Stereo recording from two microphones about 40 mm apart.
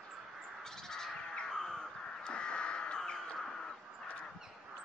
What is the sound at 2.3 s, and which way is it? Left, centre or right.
Crow, left.